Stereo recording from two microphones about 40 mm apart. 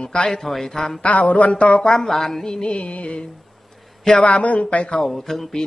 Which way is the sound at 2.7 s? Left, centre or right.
Left.